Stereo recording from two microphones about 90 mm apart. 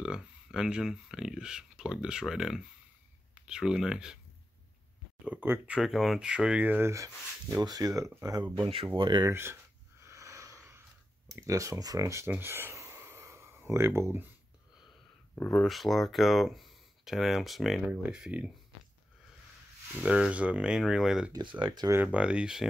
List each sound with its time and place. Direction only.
0.0 s speech: 10° right (ahead or behind)
5.2 s speech: 20° right (ahead or behind)
5.8 s speech: centre (ahead or behind); by 6.9 s 20° right (ahead or behind)
6.9 s speech: 35° right (ahead or behind)
8.9 s speech: 60° right (ahead or behind)
9.3 s a sound: 30° right (ahead or behind)
11.3 s speech: 35° right (ahead or behind)
12.3 s a sound: 25° right (ahead or behind)
15.5 s speech: centre (ahead or behind)
20.0 s speech: 10° right (ahead or behind)
21.4 s speech: 60° right (ahead or behind)
22.0 s speech: 15° right (ahead or behind)